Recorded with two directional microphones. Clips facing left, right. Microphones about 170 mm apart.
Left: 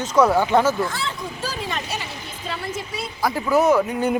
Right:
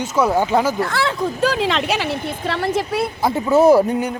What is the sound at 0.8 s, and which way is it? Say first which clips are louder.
Speech: right 6 dB; 70° right (ahead or behind).